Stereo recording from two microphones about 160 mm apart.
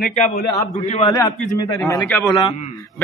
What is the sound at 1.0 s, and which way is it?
A man's voice, 25° left (ahead or behind).